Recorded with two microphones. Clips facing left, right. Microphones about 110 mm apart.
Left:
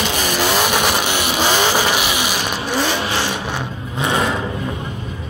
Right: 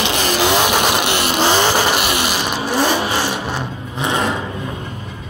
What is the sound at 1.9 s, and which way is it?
Vehicle, 55° right (ahead or behind).